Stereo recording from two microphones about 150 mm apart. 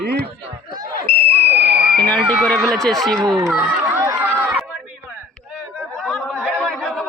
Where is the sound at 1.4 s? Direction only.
90° right.